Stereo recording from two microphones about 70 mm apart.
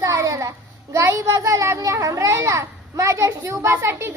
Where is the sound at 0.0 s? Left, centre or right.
Right.